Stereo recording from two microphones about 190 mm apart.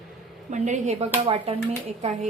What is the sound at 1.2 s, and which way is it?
Speech, 30° right (ahead or behind).